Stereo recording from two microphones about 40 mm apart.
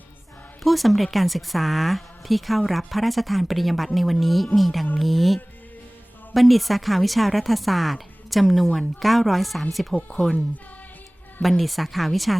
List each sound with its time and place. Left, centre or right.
0.6 s a woman's voice: centre
11.4 s a woman's voice: centre